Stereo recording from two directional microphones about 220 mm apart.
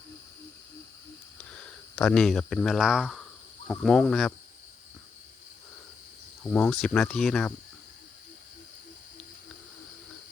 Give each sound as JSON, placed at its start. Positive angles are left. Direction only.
{"t": 2.0, "sound": "speech", "side_deg": 5}
{"t": 6.4, "sound": "speech", "side_deg": 5}